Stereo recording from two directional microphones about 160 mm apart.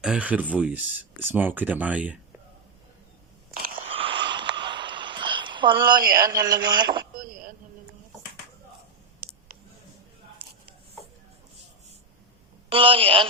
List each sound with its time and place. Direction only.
0.0 s speech: 5° right (ahead or behind)
3.5 s biting: 60° right (ahead or behind)
3.8 s a sound: 35° right (ahead or behind)
12.7 s a woman's voice: 35° right (ahead or behind)